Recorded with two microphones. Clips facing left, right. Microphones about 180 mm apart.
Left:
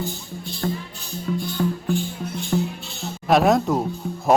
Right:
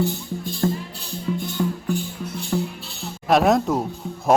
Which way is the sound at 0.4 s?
45° right (ahead or behind).